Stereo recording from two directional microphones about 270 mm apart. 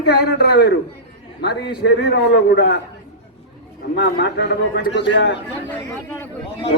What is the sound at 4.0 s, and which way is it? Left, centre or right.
A man's voice, left.